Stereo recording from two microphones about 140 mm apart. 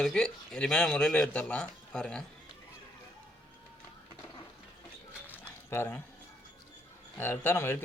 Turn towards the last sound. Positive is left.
turn(degrees=15)  # may be behind; listen again after turning